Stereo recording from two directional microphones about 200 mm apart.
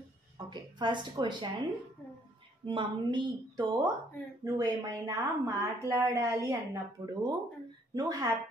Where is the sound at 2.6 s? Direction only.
25° right (ahead or behind).